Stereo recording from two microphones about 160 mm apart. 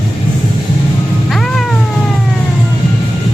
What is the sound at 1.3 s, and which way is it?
Cat, centre (ahead or behind).